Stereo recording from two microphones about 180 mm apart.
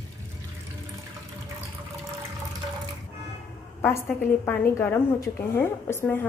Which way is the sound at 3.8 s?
10° left (ahead or behind).